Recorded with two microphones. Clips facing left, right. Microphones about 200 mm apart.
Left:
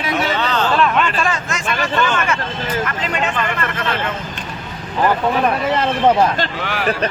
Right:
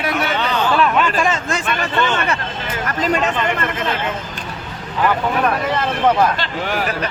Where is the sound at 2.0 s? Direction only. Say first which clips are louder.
Right 1 dB; 25° right (ahead or behind).